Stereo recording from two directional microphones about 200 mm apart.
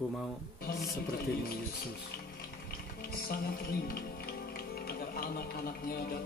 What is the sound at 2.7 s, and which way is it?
Speech, 50° left (ahead or behind).